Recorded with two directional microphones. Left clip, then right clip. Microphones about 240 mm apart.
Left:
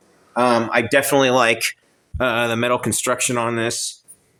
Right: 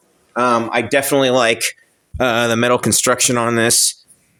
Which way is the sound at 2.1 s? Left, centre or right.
Right.